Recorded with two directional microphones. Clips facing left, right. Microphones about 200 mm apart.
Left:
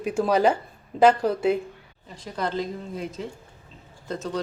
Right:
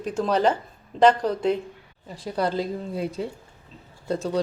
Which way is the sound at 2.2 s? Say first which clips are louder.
Right 3 dB; 35° right (ahead or behind).